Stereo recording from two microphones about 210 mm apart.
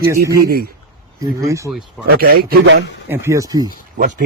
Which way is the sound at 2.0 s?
45° right (ahead or behind).